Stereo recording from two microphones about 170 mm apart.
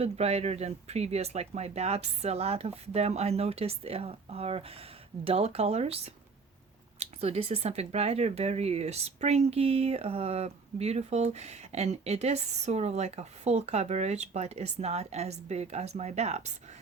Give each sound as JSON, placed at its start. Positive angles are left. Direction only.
{"t": 0.0, "sound": "speech", "side_deg": -35}
{"t": 7.0, "sound": "speech", "side_deg": -40}